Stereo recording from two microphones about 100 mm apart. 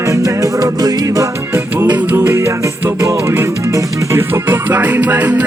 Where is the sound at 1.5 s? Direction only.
20° right (ahead or behind).